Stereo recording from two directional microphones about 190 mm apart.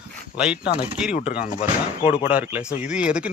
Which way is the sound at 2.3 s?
10° right (ahead or behind).